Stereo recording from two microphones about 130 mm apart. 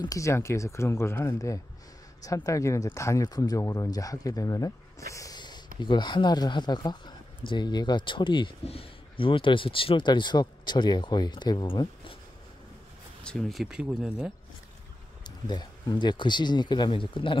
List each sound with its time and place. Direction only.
0.0 s speech: 25° left (ahead or behind); by 12.2 s 40° left (ahead or behind)
13.2 s speech: 5° left (ahead or behind)
15.2 s speech: 35° left (ahead or behind)